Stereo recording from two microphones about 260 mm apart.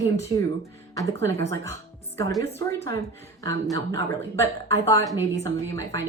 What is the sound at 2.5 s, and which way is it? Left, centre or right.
Speech, centre.